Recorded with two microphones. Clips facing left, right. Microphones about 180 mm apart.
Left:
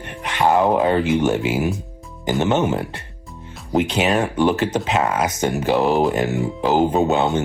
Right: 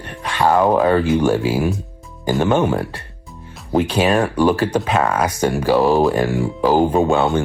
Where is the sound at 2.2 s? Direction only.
20° left (ahead or behind).